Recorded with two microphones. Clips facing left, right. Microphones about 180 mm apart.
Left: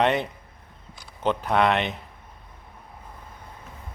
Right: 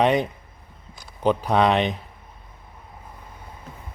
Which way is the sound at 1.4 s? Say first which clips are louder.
Right 1 dB; 15° right (ahead or behind).